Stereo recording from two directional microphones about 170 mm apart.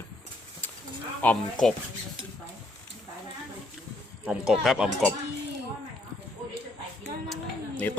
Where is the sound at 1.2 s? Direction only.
5° left (ahead or behind).